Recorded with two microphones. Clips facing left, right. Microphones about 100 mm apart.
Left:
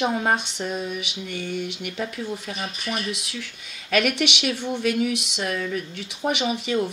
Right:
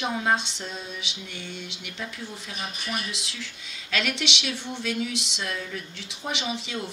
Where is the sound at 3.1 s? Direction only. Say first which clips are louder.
Left 5 dB; 55° left (ahead or behind).